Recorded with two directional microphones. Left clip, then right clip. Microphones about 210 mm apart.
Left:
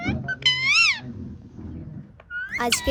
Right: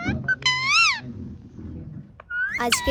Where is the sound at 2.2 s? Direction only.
5° left (ahead or behind).